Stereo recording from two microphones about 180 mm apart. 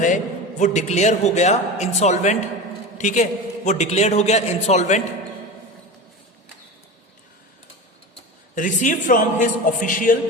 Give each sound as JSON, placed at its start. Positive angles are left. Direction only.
{"t": 0.6, "sound": "a man's voice", "side_deg": 40}
{"t": 8.5, "sound": "a man's voice", "side_deg": 45}